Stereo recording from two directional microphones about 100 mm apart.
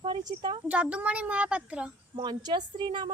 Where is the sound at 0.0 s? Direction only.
50° right (ahead or behind).